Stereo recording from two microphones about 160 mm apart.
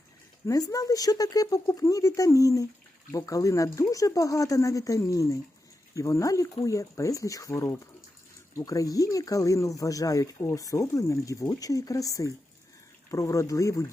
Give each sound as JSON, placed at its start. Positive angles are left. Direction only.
{"t": 0.4, "sound": "speech", "side_deg": 20}